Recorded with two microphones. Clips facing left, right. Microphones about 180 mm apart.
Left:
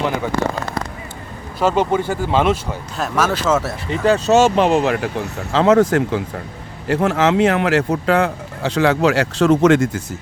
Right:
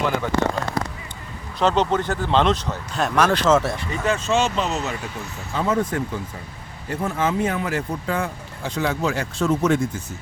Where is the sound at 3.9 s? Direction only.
35° left (ahead or behind).